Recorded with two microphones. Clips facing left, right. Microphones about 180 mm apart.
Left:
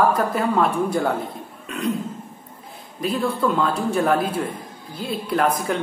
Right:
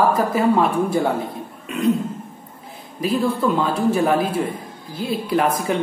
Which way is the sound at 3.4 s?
Centre (ahead or behind).